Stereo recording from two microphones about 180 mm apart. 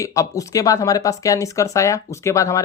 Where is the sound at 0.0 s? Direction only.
15° left (ahead or behind).